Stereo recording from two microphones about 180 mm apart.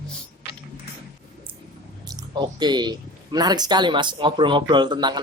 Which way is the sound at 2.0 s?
25° right (ahead or behind).